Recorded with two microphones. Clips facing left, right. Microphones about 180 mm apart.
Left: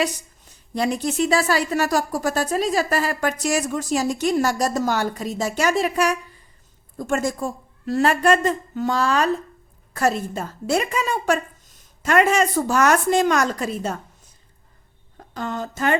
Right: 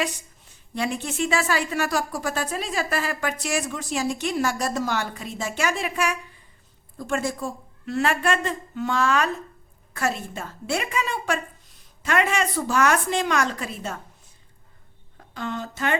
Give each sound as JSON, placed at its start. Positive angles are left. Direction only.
{"t": 0.0, "sound": "a woman's voice", "side_deg": 40}
{"t": 15.2, "sound": "speech", "side_deg": 40}